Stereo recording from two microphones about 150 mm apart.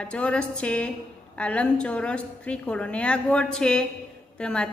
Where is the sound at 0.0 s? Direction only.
5° left (ahead or behind).